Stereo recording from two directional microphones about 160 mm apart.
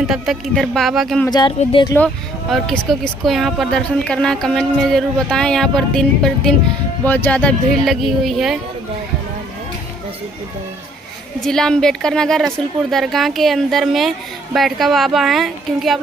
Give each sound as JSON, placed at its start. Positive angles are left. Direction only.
{"t": 0.0, "sound": "speech", "side_deg": -5}
{"t": 1.6, "sound": "speech", "side_deg": 35}
{"t": 2.5, "sound": "speech", "side_deg": 0}
{"t": 11.4, "sound": "speech", "side_deg": 5}